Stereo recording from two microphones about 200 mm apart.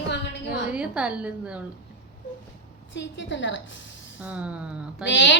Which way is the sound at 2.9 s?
65° left (ahead or behind).